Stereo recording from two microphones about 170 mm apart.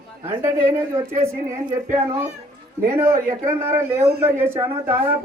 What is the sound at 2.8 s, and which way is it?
A woman's voice, 15° right (ahead or behind).